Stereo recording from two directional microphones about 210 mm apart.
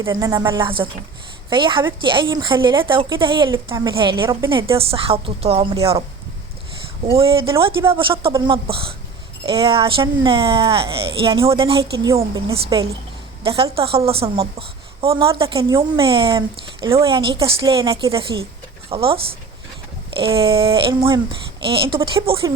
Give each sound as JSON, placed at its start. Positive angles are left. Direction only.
{"t": 0.0, "sound": "a woman's voice", "side_deg": -15}
{"t": 7.1, "sound": "a woman's voice", "side_deg": -25}